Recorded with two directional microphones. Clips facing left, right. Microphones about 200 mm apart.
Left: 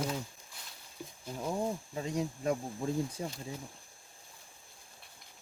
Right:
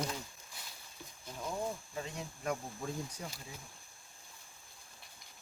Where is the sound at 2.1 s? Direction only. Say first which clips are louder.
Left 8 dB; 35° left (ahead or behind).